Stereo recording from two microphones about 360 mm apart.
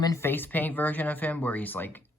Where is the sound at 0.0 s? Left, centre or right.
Centre.